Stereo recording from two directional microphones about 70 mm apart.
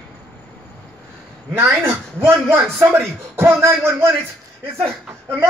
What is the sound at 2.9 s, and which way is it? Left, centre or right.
Speech, right.